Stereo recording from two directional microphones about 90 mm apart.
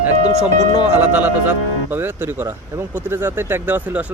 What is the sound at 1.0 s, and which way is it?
Speech, 20° right (ahead or behind).